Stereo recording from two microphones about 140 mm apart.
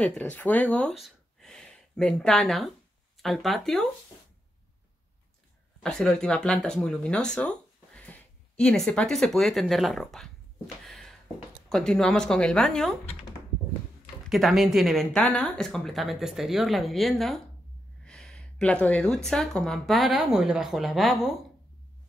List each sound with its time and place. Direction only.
0.0 s speech: 10° left (ahead or behind)
0.9 s a sound: centre (ahead or behind)
3.2 s a woman's voice: centre (ahead or behind)
5.8 s speech: 5° left (ahead or behind)
10.9 s a sound: 5° left (ahead or behind)
11.7 s a woman's voice: 5° left (ahead or behind)
14.3 s a woman's voice: centre (ahead or behind)